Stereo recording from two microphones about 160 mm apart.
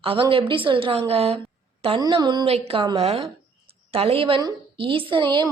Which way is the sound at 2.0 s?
25° right (ahead or behind).